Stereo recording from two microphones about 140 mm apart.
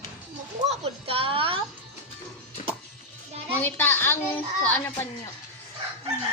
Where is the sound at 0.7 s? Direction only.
45° right (ahead or behind).